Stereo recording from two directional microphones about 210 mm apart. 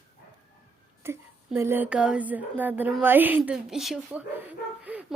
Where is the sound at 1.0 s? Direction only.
10° right (ahead or behind).